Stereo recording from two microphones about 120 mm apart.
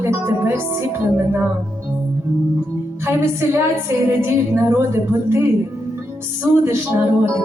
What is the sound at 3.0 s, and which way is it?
Speech, 20° right (ahead or behind).